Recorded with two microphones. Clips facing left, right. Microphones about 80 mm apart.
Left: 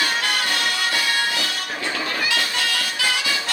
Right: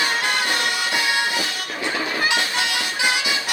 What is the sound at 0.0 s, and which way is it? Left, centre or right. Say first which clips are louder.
Music: right 1 dB; right.